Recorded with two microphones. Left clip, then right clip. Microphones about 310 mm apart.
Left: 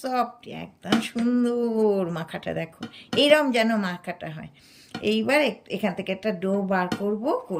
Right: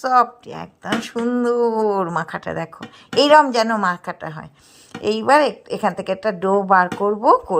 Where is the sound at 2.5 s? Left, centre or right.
Right.